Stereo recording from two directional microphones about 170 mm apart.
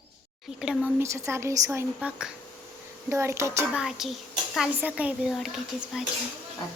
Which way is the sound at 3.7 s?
5° right (ahead or behind).